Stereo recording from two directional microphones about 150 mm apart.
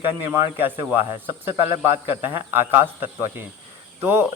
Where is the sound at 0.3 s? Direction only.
20° right (ahead or behind).